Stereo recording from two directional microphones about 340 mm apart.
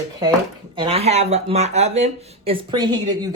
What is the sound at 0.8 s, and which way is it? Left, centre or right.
Speech, centre.